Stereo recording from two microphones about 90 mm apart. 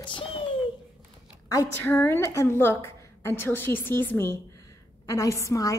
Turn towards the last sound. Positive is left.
turn(degrees=35)  # may be behind; listen again after turning